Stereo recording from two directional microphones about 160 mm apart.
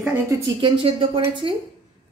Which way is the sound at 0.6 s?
35° right (ahead or behind).